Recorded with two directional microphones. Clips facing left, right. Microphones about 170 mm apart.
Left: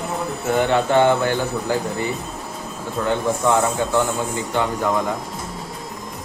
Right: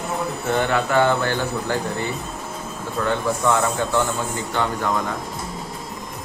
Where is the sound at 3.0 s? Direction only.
20° left (ahead or behind).